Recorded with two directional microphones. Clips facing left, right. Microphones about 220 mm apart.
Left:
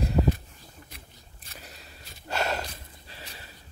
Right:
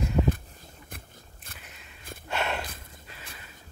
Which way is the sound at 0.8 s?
50° right (ahead or behind).